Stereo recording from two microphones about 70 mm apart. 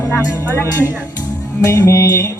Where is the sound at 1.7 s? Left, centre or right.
Left.